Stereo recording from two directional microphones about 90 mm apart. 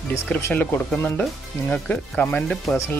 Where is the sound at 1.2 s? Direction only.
10° left (ahead or behind).